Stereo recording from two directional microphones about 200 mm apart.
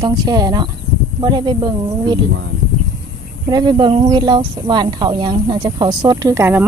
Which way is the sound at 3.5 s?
20° right (ahead or behind).